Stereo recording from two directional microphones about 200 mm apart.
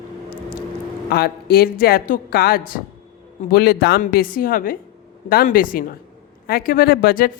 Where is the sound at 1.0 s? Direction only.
50° left (ahead or behind).